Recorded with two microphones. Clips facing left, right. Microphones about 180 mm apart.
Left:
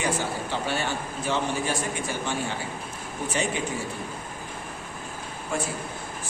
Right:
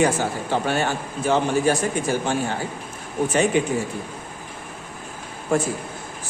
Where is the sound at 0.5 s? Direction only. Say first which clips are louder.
Right 8 dB; 50° right (ahead or behind).